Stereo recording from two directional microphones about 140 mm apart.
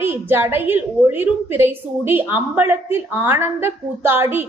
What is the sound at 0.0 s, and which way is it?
A woman's voice, 15° right (ahead or behind).